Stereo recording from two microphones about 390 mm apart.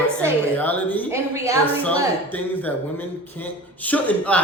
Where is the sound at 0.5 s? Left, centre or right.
Centre.